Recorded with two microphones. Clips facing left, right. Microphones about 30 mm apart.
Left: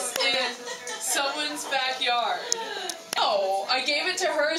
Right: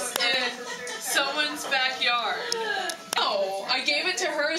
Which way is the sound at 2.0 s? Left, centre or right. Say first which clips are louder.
Even; centre.